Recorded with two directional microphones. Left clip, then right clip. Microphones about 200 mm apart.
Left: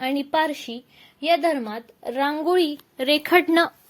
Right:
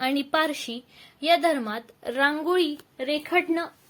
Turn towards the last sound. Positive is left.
turn(degrees=55)  # may be behind; listen again after turning